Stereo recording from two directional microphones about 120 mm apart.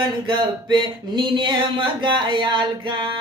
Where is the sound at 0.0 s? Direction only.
40° right (ahead or behind).